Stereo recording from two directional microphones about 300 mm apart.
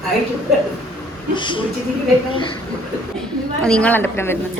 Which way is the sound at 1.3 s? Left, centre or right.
Centre.